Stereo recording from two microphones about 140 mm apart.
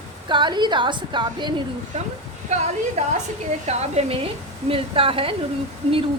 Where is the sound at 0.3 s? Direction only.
35° right (ahead or behind).